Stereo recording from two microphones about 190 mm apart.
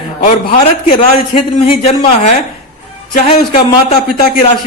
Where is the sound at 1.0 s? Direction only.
30° left (ahead or behind).